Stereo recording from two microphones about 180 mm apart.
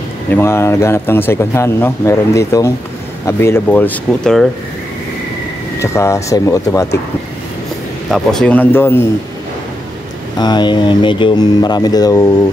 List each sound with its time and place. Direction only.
0.3 s speech: 15° left (ahead or behind)
5.8 s speech: 15° left (ahead or behind)
8.1 s speech: 5° left (ahead or behind)
10.4 s speech: 25° left (ahead or behind)